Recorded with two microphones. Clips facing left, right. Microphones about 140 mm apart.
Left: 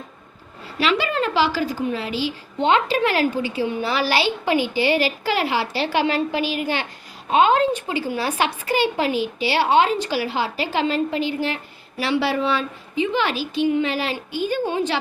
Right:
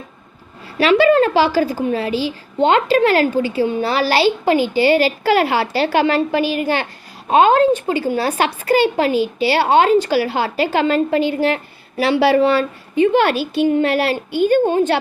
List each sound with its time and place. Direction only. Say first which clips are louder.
1.9 s a woman's voice: right 5 dB; 45° right (ahead or behind)
5.2 s a woman's voice: right 6 dB; 55° right (ahead or behind)
8.1 s a woman's voice: right 2 dB; 40° right (ahead or behind)
8.4 s a woman's voice: right 6 dB; 50° right (ahead or behind); by 12.4 s 75° right (ahead or behind)
12.4 s speech: right 7 dB; 45° right (ahead or behind)
14.7 s a woman's voice: right 7 dB; 50° right (ahead or behind)